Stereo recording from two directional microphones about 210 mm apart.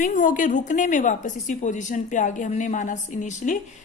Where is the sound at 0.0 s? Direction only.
40° left (ahead or behind).